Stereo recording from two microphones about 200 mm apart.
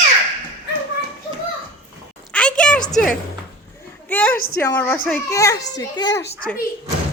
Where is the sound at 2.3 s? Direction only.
5° left (ahead or behind).